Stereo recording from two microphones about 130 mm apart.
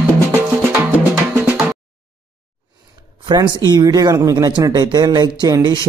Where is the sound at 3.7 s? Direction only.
30° right (ahead or behind).